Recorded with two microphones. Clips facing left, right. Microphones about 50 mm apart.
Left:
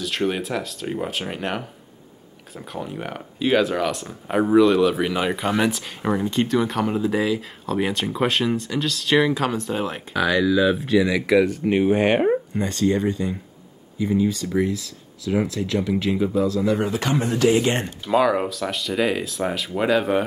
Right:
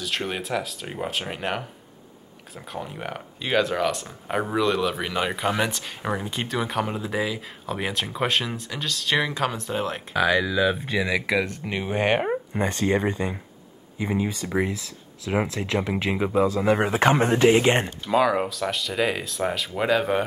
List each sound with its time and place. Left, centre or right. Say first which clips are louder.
0.0 s speech: left 5 dB; centre
12.5 s speech: left 2 dB; right
17.8 s speech: left 2 dB; centre